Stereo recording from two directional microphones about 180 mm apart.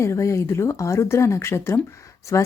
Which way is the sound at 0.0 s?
15° left (ahead or behind).